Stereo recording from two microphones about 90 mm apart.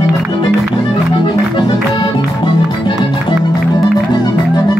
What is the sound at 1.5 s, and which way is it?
Accordion, 65° left (ahead or behind).